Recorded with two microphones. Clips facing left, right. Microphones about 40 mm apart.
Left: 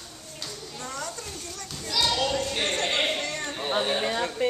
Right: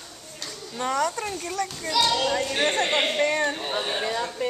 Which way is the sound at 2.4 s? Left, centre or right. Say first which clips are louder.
Right 4 dB; right.